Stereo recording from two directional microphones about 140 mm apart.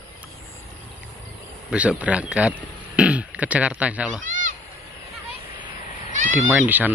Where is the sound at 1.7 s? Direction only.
10° right (ahead or behind).